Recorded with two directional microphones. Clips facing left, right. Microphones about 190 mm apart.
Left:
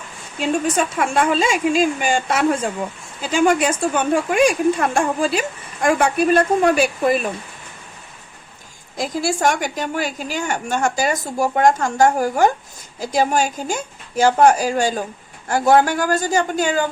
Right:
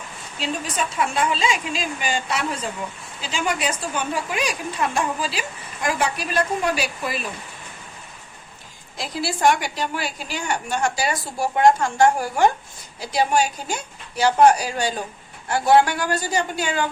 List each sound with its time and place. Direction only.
0.3 s speech: 50° left (ahead or behind)
9.0 s speech: 45° left (ahead or behind)